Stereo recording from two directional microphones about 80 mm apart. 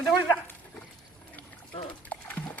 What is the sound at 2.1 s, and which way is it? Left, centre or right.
Sewing machine, centre.